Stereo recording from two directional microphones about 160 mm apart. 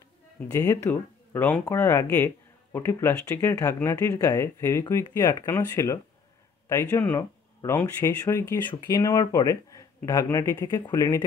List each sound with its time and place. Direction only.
0.5 s speech: 15° left (ahead or behind)